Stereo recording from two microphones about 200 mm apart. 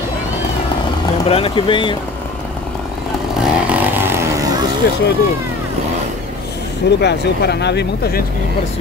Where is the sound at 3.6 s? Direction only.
10° right (ahead or behind).